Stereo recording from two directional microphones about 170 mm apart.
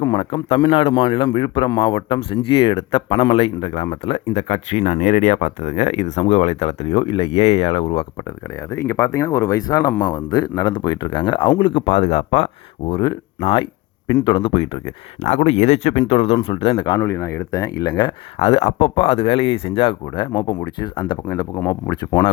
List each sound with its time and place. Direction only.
0.0 s speech: 25° left (ahead or behind)
8.7 s speech: 15° left (ahead or behind)
10.2 s speech: 25° left (ahead or behind)
17.0 s speech: 15° left (ahead or behind)